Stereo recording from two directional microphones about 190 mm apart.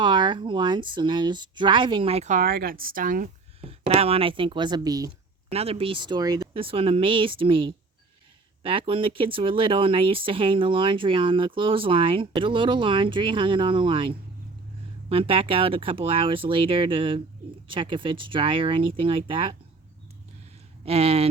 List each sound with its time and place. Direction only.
0.0 s speech: 25° right (ahead or behind); by 3.2 s 45° right (ahead or behind)
3.6 s speech: 30° right (ahead or behind)
5.5 s speech: 30° right (ahead or behind)
20.8 s speech: 30° right (ahead or behind)